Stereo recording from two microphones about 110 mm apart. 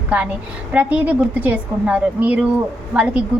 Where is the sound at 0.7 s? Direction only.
15° right (ahead or behind).